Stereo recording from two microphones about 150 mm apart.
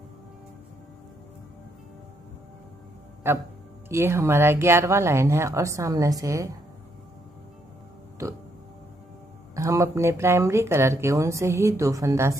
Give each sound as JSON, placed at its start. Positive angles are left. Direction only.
{"t": 3.3, "sound": "speech", "side_deg": -15}
{"t": 8.2, "sound": "speech", "side_deg": -20}
{"t": 9.6, "sound": "speech", "side_deg": -20}